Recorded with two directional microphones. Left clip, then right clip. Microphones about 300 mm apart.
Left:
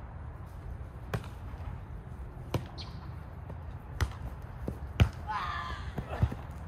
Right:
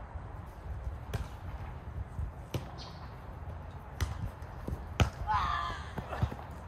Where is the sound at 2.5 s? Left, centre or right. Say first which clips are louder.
Left 4 dB; centre.